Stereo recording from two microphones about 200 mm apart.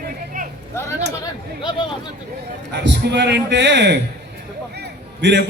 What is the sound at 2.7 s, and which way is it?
A man's voice, 60° right (ahead or behind).